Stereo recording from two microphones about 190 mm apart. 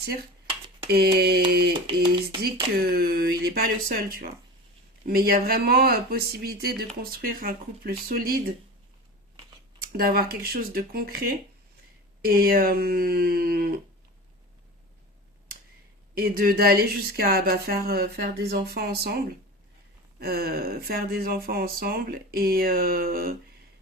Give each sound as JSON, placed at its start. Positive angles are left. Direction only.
{"t": 0.0, "sound": "speech", "side_deg": -55}
{"t": 0.9, "sound": "mantra", "side_deg": -55}
{"t": 1.7, "sound": "a sound", "side_deg": -25}
{"t": 2.4, "sound": "speech", "side_deg": -55}
{"t": 9.8, "sound": "speech", "side_deg": -50}
{"t": 16.1, "sound": "speech", "side_deg": -50}
{"t": 20.1, "sound": "speech", "side_deg": -55}